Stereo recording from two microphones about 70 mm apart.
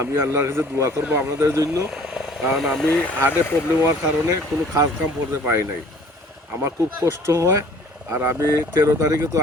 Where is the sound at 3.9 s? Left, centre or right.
Right.